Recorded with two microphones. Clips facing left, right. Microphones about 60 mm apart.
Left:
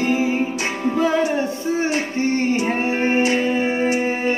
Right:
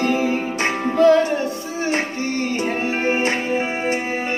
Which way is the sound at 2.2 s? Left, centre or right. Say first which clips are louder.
Left 4 dB; left.